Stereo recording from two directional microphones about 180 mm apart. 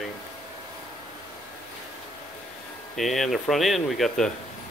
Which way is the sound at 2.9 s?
Centre (ahead or behind).